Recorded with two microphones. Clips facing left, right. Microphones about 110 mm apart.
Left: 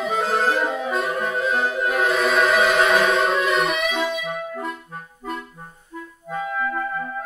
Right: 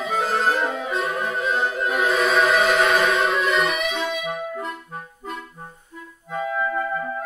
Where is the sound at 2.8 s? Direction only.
30° left (ahead or behind).